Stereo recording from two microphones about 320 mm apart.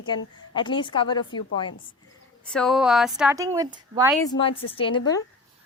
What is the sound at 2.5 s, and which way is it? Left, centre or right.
A woman's voice, centre.